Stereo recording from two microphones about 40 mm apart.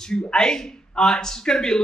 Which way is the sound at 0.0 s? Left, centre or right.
Centre.